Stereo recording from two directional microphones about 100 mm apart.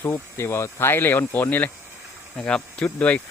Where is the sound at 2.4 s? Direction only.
10° left (ahead or behind).